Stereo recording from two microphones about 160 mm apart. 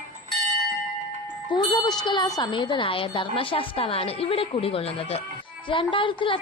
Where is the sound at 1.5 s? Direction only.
30° left (ahead or behind).